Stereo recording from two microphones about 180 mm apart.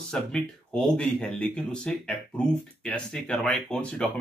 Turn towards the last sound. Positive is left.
turn(degrees=5)  # may be behind; listen again after turning